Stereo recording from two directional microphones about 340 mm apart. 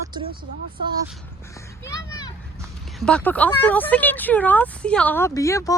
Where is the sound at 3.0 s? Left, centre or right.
Centre.